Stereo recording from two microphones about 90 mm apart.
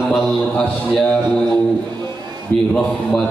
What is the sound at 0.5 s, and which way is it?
Speech, 10° left (ahead or behind).